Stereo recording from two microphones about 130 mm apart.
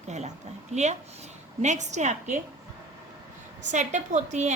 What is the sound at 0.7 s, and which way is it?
Speech, 60° right (ahead or behind).